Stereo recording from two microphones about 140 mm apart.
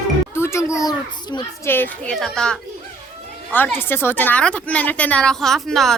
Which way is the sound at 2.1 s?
5° left (ahead or behind).